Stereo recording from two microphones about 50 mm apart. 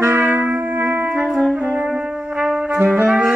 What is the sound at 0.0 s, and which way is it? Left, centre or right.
Trumpet, right.